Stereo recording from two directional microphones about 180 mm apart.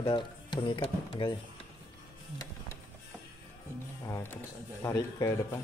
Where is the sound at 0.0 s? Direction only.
25° left (ahead or behind).